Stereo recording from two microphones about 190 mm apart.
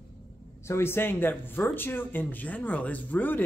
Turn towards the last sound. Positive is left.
turn(degrees=10)  # may be behind; listen again after turning